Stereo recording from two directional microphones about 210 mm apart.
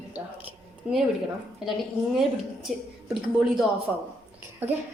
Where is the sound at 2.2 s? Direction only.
Centre (ahead or behind).